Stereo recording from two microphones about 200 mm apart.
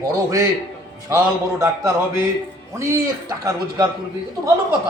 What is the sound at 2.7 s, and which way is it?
A man's voice, 15° right (ahead or behind).